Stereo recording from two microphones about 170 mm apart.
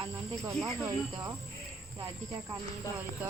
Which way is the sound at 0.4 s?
15° right (ahead or behind).